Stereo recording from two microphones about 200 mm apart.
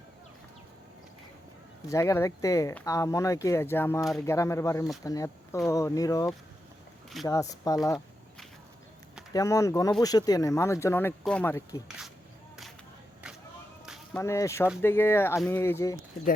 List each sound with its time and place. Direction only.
1.9 s speech: 15° left (ahead or behind)
9.3 s speech: 15° left (ahead or behind)
13.8 s whip: 5° right (ahead or behind)
14.2 s speech: 15° left (ahead or behind)